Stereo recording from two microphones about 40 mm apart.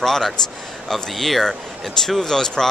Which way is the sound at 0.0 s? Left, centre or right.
Centre.